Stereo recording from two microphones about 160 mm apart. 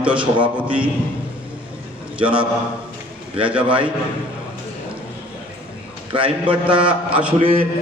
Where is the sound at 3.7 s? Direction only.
30° right (ahead or behind).